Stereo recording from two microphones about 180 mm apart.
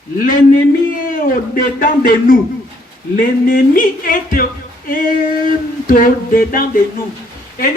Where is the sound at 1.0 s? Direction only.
50° left (ahead or behind).